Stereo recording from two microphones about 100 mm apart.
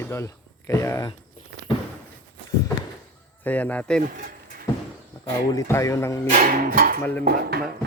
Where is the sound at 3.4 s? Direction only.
15° left (ahead or behind).